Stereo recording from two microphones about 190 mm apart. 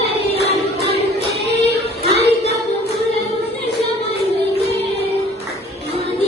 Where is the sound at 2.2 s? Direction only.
35° left (ahead or behind).